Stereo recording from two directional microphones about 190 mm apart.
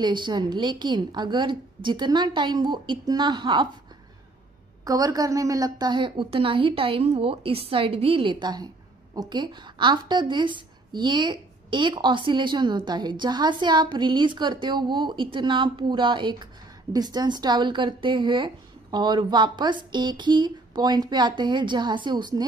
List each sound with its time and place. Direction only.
0.0 s a woman's voice: 25° right (ahead or behind)
4.8 s a woman's voice: 20° right (ahead or behind)